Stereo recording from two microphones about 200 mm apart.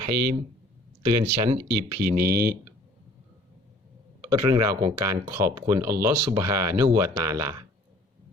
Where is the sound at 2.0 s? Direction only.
50° right (ahead or behind).